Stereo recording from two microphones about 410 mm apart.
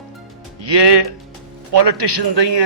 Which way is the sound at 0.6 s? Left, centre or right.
Right.